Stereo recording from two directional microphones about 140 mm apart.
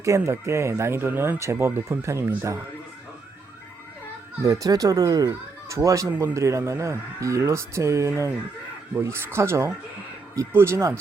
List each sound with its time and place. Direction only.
0.0 s speech: 20° right (ahead or behind)
4.4 s speech: 25° right (ahead or behind)